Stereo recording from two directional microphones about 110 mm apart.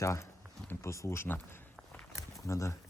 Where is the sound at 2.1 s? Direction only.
30° left (ahead or behind).